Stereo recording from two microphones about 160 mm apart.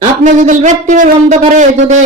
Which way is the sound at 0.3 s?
50° right (ahead or behind).